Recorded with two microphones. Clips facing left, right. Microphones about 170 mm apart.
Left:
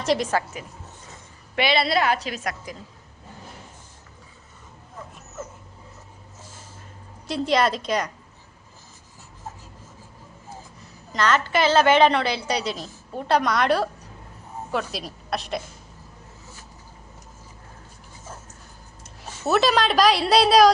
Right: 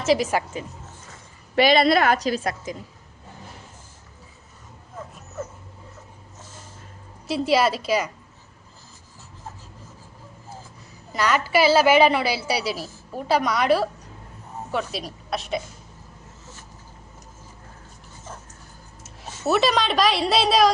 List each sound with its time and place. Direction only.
0.0 s speech: 5° right (ahead or behind)
1.5 s a woman's voice: 45° right (ahead or behind)
7.3 s speech: 5° right (ahead or behind)
11.1 s a woman's voice: 10° right (ahead or behind)
19.0 s speech: 5° right (ahead or behind)